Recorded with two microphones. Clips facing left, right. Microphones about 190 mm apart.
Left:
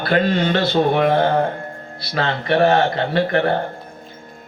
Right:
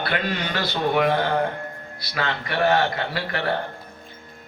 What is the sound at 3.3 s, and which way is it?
Speech, 55° left (ahead or behind).